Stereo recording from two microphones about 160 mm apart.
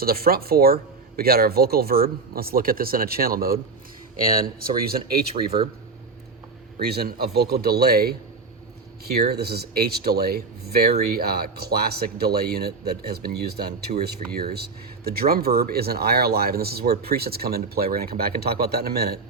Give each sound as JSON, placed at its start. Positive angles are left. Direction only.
{"t": 0.0, "sound": "speech", "side_deg": -70}
{"t": 4.8, "sound": "speech", "side_deg": -70}
{"t": 5.4, "sound": "speech", "side_deg": -35}
{"t": 6.8, "sound": "speech", "side_deg": -80}
{"t": 9.1, "sound": "speech", "side_deg": -80}